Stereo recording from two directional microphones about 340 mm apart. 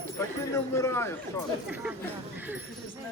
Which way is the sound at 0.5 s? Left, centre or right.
Centre.